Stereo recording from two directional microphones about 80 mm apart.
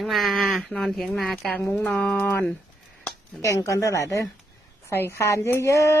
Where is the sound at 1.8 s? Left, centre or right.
Centre.